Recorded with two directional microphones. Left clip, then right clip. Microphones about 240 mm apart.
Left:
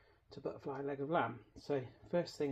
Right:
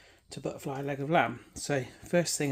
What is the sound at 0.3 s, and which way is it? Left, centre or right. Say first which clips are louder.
Speech: right 7 dB; right.